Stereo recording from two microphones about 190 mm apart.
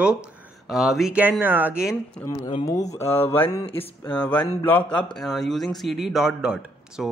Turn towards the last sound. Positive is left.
turn(degrees=-5)  # may be behind; listen again after turning